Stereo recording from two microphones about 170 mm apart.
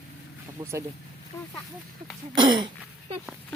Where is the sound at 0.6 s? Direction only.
30° right (ahead or behind).